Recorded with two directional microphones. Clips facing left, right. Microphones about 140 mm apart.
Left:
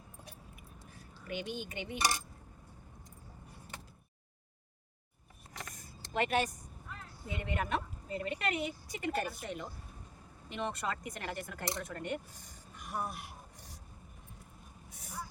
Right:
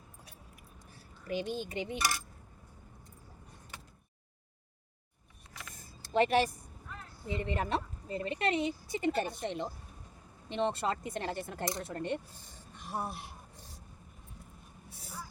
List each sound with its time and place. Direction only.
0.9 s speech: 35° right (ahead or behind)
2.0 s dishes: 20° left (ahead or behind)
6.1 s a woman's voice: 30° right (ahead or behind)
14.8 s vehicle: 30° right (ahead or behind)